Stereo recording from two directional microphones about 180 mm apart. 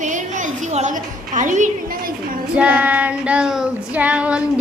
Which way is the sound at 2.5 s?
5° right (ahead or behind).